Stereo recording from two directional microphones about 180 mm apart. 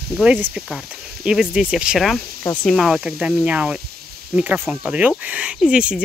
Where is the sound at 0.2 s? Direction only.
5° right (ahead or behind).